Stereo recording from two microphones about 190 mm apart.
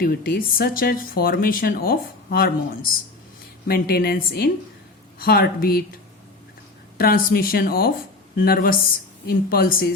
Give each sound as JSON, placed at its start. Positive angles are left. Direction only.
{"t": 0.0, "sound": "a woman's voice", "side_deg": 50}
{"t": 6.9, "sound": "speech", "side_deg": 50}